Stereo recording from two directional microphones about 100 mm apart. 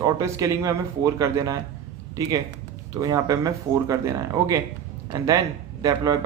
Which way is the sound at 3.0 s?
40° right (ahead or behind).